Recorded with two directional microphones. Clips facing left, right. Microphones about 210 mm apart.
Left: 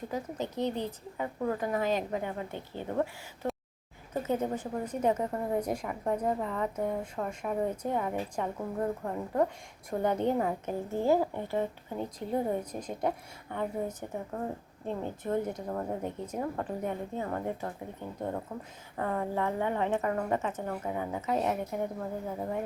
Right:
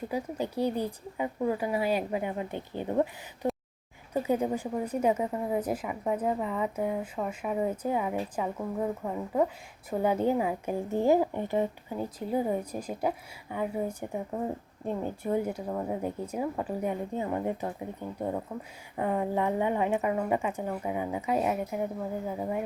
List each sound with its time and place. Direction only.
0.1 s a woman's voice: 10° right (ahead or behind)
3.4 s a sound: 15° right (ahead or behind)
4.1 s a woman's voice: 10° right (ahead or behind)
11.9 s a woman's voice: 5° right (ahead or behind)